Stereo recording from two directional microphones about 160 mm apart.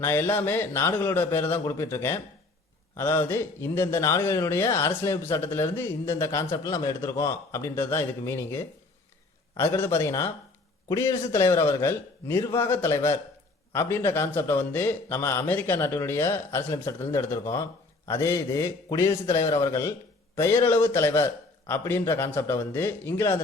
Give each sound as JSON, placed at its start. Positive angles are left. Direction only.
{"t": 0.0, "sound": "a man's voice", "side_deg": 15}